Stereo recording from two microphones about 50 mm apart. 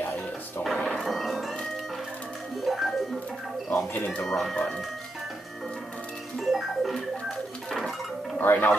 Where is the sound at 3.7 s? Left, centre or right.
Left.